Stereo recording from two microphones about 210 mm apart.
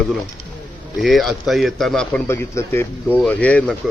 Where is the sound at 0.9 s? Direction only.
Centre (ahead or behind).